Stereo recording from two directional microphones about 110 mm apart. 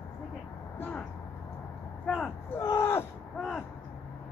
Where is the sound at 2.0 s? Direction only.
5° left (ahead or behind).